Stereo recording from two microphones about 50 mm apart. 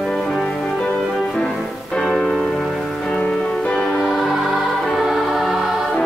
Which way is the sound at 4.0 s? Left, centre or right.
Centre.